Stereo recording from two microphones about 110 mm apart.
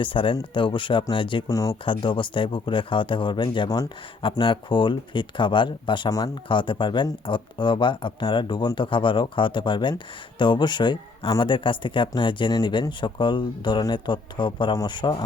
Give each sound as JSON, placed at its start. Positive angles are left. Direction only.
{"t": 0.0, "sound": "speech", "side_deg": 50}
{"t": 1.5, "sound": "speech", "side_deg": 30}
{"t": 1.8, "sound": "speech", "side_deg": 50}
{"t": 6.1, "sound": "speech", "side_deg": 30}
{"t": 6.5, "sound": "speech", "side_deg": 45}